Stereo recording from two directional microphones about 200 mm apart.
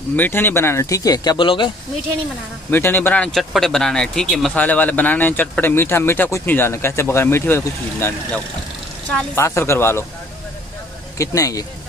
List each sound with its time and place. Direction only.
0.1 s speech: 10° left (ahead or behind)
2.7 s speech: 10° left (ahead or behind)
11.1 s speech: 15° left (ahead or behind)